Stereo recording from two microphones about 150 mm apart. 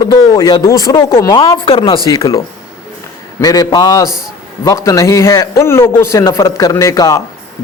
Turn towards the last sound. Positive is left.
turn(degrees=20)  # may be behind; listen again after turning